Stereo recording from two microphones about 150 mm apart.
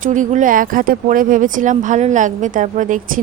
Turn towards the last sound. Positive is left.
turn(degrees=-60)  # may be behind; listen again after turning